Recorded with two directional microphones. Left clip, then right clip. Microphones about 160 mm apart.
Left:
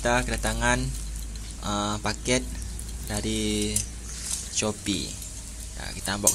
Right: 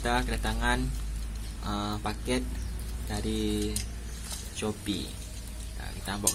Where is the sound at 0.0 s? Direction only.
35° left (ahead or behind).